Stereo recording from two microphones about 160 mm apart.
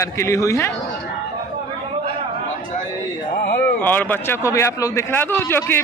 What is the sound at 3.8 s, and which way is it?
A man's voice, 10° left (ahead or behind).